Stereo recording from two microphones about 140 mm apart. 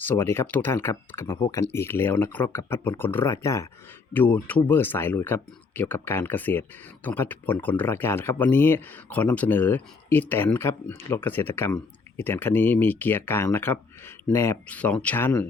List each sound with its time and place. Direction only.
0.0 s speech: 15° left (ahead or behind)